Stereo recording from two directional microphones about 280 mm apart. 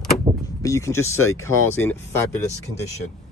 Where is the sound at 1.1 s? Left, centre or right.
Left.